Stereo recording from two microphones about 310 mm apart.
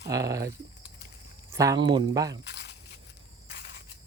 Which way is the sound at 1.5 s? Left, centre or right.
Centre.